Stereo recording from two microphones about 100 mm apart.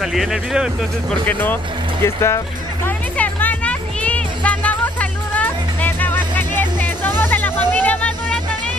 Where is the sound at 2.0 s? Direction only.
30° left (ahead or behind).